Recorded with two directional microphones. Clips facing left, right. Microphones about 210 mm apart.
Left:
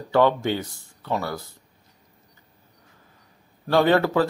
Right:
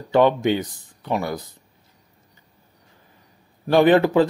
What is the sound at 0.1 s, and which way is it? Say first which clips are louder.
Speech: right 3 dB; 20° right (ahead or behind).